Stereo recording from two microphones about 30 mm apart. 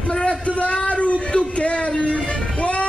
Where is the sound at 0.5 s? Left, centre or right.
Left.